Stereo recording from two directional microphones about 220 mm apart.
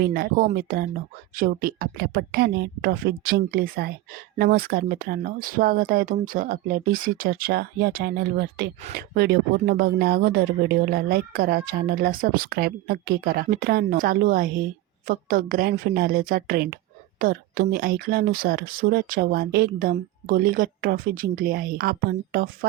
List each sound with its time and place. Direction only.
0.0 s a woman's voice: 45° right (ahead or behind)